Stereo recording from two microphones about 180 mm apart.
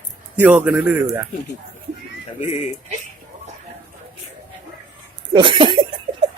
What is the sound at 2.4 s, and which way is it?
Speech, 35° left (ahead or behind).